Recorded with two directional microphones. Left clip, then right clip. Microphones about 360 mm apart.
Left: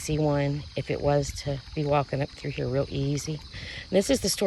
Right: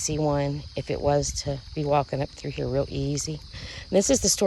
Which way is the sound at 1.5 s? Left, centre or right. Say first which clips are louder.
Right 1 dB; right.